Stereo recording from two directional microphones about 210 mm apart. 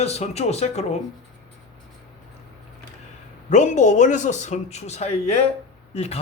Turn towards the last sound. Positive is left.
turn(degrees=30)  # may be behind; listen again after turning